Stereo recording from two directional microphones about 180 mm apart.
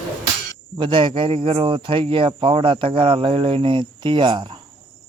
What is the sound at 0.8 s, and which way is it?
Speech, 25° right (ahead or behind).